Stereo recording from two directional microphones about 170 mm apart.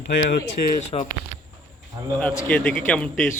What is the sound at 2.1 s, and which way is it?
Speech, 10° left (ahead or behind).